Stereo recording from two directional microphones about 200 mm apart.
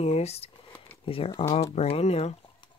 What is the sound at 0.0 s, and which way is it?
Speech, 30° left (ahead or behind).